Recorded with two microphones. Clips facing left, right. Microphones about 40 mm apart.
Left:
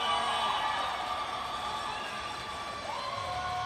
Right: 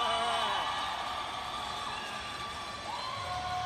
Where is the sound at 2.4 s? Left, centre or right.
Left.